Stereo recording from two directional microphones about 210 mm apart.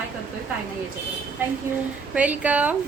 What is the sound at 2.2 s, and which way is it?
Speech, 5° right (ahead or behind).